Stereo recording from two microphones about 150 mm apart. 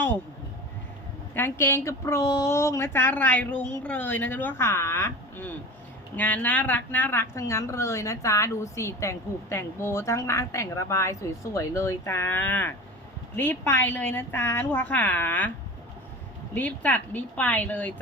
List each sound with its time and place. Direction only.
1.4 s a woman's voice: 15° left (ahead or behind)
16.6 s a woman's voice: 10° left (ahead or behind)